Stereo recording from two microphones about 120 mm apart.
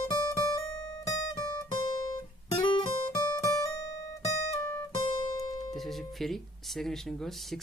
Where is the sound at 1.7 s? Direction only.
35° left (ahead or behind).